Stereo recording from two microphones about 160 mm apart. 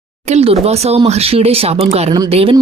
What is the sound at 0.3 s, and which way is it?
Speech, 40° right (ahead or behind).